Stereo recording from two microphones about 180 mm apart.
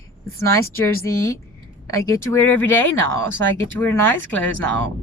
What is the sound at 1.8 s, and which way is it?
Speech, 15° left (ahead or behind).